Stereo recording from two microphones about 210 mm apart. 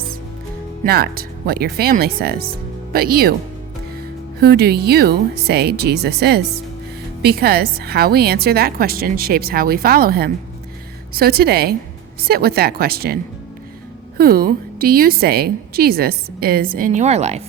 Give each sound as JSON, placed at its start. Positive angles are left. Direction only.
{"t": 0.9, "sound": "a woman's voice", "side_deg": -50}
{"t": 4.4, "sound": "a woman's voice", "side_deg": -50}
{"t": 14.2, "sound": "a woman's voice", "side_deg": -45}